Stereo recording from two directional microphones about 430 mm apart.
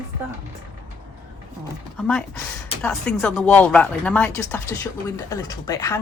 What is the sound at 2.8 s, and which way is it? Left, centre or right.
Speech, centre.